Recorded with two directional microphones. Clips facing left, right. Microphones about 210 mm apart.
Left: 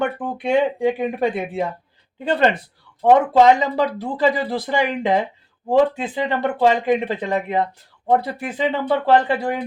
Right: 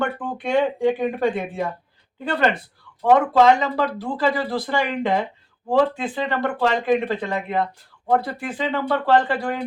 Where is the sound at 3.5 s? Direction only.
20° left (ahead or behind).